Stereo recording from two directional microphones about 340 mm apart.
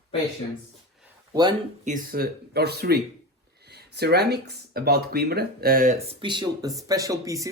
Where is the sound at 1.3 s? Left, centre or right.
Centre.